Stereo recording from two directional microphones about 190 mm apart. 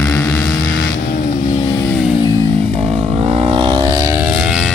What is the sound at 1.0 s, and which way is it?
Vehicle, 50° left (ahead or behind).